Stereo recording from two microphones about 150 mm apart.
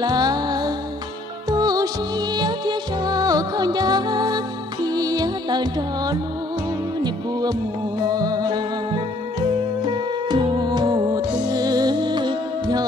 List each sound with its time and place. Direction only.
0.0 s music: 25° right (ahead or behind)